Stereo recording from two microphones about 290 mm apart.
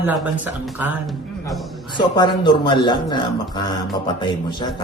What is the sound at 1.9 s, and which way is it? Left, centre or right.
A man's voice, centre.